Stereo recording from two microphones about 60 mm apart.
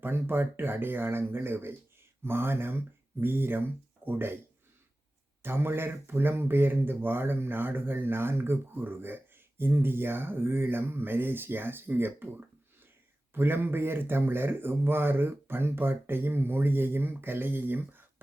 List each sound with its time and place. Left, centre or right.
0.0 s speech: right
5.4 s speech: right